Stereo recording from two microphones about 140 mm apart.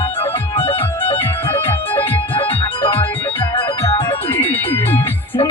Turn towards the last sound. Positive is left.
turn(degrees=15)  # may be behind; listen again after turning